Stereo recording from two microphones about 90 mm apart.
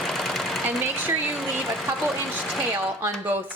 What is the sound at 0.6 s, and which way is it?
Speech, 20° right (ahead or behind).